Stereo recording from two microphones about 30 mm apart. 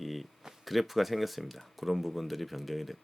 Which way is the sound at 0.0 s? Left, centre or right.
Centre.